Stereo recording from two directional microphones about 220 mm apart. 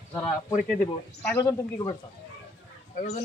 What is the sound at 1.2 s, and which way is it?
Speech, 15° left (ahead or behind).